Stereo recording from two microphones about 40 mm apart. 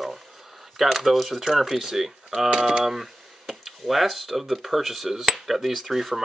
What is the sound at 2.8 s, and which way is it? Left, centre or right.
Speech, centre.